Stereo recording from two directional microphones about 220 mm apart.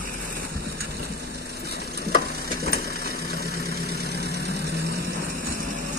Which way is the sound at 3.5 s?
45° right (ahead or behind).